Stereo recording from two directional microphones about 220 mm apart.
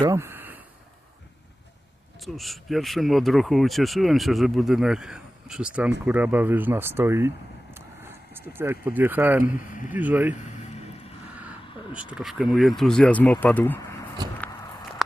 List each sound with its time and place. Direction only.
0.0 s a sound: 10° right (ahead or behind)
2.2 s speech: centre (ahead or behind)
9.5 s speech: 35° left (ahead or behind)
9.9 s speech: 10° right (ahead or behind)
11.9 s speech: 5° right (ahead or behind)